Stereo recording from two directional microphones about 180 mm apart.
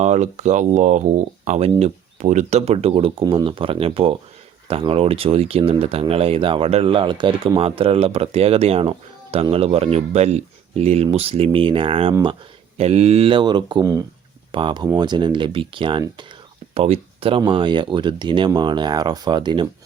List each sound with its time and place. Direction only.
0.0 s speech: 40° right (ahead or behind); by 19.6 s 25° right (ahead or behind)